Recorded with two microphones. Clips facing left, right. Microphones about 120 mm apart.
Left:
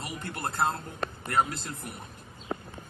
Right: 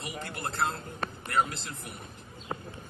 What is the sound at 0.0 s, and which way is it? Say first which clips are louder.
Speech: left 2 dB; 45° left (ahead or behind).